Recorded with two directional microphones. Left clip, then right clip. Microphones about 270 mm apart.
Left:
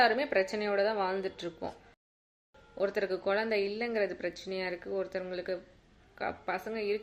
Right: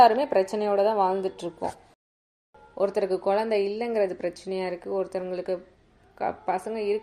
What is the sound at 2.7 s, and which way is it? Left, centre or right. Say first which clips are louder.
A woman's voice: right 7 dB; centre.